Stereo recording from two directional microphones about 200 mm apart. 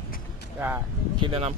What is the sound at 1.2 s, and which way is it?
Speech, 30° right (ahead or behind).